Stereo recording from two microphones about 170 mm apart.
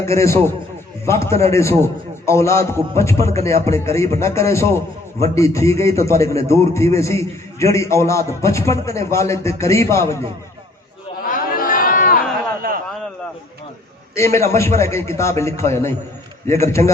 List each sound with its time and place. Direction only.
0.0 s a man's voice: 15° left (ahead or behind)
11.3 s chatter: 55° left (ahead or behind)
12.6 s a sound: 60° right (ahead or behind)
14.2 s a man's voice: 15° left (ahead or behind)